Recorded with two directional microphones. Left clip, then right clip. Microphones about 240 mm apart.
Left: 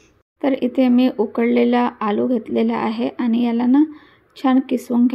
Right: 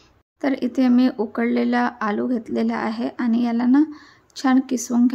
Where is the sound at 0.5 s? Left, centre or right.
Right.